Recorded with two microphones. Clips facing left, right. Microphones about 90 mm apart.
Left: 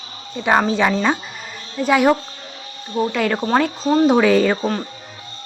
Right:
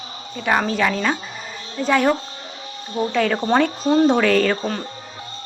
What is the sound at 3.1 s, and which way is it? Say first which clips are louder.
A woman's voice: right 2 dB; 5° left (ahead or behind).